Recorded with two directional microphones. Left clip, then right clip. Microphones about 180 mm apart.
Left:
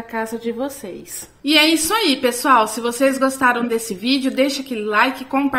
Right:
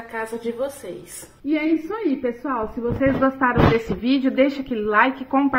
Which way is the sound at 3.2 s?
10° left (ahead or behind).